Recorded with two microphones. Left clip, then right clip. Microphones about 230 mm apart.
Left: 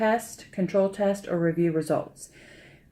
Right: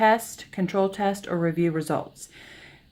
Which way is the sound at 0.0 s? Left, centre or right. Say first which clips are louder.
Right 5 dB; right.